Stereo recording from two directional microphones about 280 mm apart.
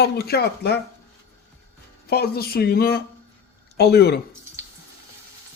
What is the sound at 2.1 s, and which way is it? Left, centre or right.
Speech, left.